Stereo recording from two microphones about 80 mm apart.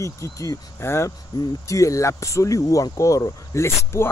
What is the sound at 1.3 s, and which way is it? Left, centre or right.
Speech, left.